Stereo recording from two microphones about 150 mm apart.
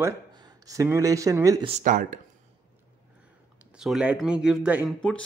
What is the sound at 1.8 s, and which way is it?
Speech, 65° right (ahead or behind).